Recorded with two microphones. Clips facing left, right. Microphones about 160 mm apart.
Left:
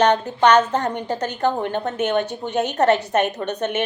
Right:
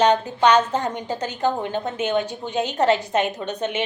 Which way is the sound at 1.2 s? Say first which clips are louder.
Left 1 dB; 60° left (ahead or behind).